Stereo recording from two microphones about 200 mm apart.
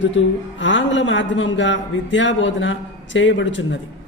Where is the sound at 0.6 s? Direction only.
65° left (ahead or behind).